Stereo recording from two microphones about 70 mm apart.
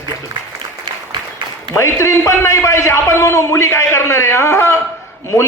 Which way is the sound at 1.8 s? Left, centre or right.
Left.